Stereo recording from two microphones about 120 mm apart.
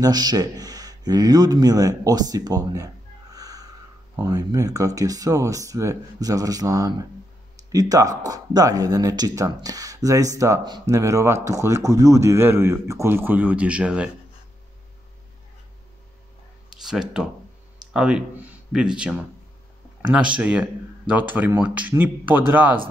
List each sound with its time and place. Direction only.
0.0 s speech: 35° right (ahead or behind); by 14.1 s 10° right (ahead or behind)
16.8 s speech: 5° right (ahead or behind)